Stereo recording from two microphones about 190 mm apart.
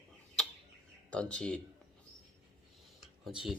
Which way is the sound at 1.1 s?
5° left (ahead or behind).